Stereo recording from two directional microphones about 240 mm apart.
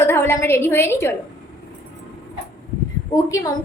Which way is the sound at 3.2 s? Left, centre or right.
Centre.